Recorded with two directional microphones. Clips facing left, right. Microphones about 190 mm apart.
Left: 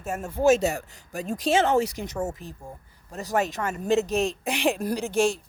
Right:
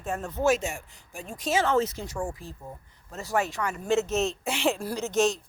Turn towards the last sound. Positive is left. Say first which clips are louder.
# left 1 dB
turn(degrees=10)  # may be behind; listen again after turning